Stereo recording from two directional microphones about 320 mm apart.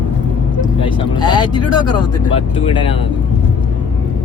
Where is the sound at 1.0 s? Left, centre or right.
Centre.